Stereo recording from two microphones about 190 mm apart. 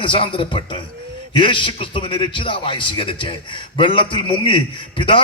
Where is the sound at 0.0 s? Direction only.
25° left (ahead or behind).